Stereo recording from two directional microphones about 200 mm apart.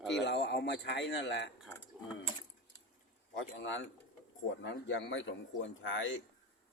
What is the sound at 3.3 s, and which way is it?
A man's voice, 70° left (ahead or behind).